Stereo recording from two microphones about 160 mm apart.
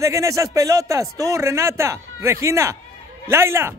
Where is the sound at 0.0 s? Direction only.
20° right (ahead or behind).